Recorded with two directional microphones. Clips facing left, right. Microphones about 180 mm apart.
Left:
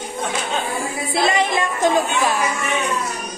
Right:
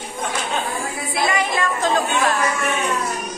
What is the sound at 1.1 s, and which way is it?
Music, 25° left (ahead or behind).